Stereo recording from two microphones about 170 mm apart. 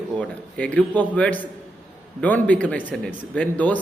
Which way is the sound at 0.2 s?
5° left (ahead or behind).